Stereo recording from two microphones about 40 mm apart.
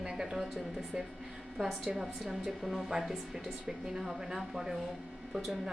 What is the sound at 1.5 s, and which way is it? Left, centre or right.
Speech, centre.